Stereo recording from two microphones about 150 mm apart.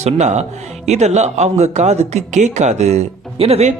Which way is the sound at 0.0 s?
50° right (ahead or behind).